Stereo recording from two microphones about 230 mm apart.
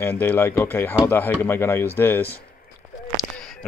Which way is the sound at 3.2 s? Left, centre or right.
Centre.